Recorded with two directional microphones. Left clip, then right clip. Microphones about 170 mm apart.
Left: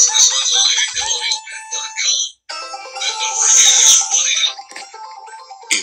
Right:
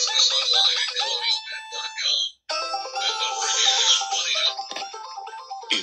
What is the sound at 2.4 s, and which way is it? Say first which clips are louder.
Music: right 1 dB; 35° right (ahead or behind).